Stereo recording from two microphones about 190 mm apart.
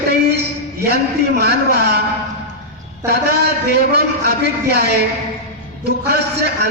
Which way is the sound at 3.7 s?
60° right (ahead or behind).